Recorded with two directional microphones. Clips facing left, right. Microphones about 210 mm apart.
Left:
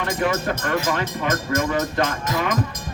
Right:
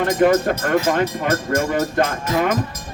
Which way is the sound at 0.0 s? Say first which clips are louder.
Right 7 dB; 45° right (ahead or behind).